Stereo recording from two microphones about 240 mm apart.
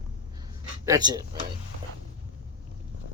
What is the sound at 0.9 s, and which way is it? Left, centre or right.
Speech, centre.